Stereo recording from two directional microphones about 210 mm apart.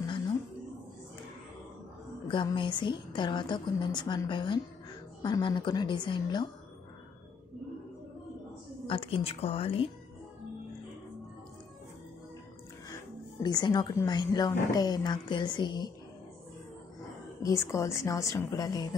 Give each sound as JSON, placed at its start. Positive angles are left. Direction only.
{"t": 0.0, "sound": "a sound", "side_deg": 20}
{"t": 2.2, "sound": "a woman's voice", "side_deg": 25}
{"t": 8.8, "sound": "a woman's voice", "side_deg": 25}
{"t": 12.9, "sound": "a woman's voice", "side_deg": 20}
{"t": 17.4, "sound": "a woman's voice", "side_deg": 15}